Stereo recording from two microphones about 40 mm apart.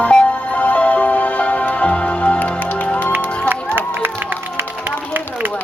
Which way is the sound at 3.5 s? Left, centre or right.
Right.